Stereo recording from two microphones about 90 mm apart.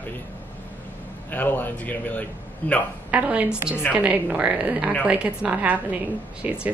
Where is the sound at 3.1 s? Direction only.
15° right (ahead or behind).